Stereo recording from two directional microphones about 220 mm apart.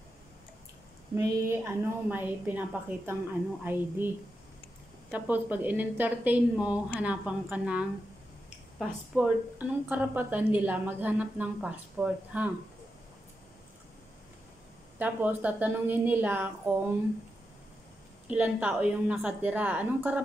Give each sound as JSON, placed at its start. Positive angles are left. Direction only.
{"t": 1.1, "sound": "a woman's voice", "side_deg": -10}
{"t": 5.1, "sound": "a woman's voice", "side_deg": -5}
{"t": 15.0, "sound": "a woman's voice", "side_deg": -5}
{"t": 18.2, "sound": "a woman's voice", "side_deg": -5}